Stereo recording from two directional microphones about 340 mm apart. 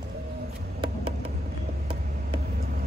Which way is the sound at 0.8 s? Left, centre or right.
Centre.